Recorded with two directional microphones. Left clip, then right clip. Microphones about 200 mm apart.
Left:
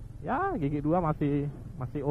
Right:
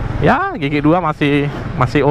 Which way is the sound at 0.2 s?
10° right (ahead or behind).